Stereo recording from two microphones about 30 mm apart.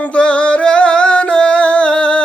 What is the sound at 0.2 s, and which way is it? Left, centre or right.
Music, left.